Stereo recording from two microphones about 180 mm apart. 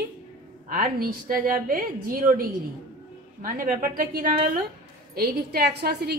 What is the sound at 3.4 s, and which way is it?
A woman's voice, 50° right (ahead or behind).